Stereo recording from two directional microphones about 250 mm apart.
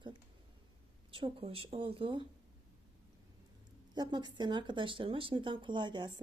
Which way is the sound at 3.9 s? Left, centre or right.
Centre.